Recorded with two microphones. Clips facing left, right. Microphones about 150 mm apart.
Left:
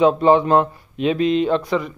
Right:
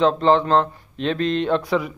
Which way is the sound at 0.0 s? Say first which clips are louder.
Left 3 dB; 10° left (ahead or behind).